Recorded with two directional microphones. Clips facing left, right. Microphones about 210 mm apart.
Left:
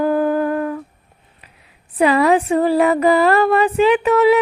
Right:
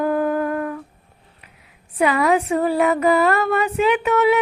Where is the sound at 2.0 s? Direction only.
35° left (ahead or behind).